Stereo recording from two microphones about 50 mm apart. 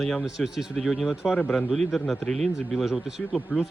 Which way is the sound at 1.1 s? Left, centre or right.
Centre.